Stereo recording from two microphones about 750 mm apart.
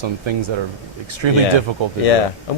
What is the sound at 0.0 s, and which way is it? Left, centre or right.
Speech, right.